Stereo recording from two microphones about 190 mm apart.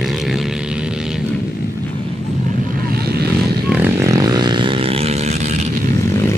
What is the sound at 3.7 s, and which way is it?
Vehicle, 10° right (ahead or behind).